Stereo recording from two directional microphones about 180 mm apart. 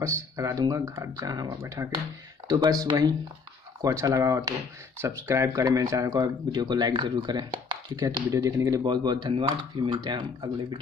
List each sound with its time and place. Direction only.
0.0 s speech: 15° right (ahead or behind)